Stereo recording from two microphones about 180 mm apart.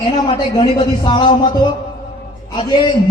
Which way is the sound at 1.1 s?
25° left (ahead or behind).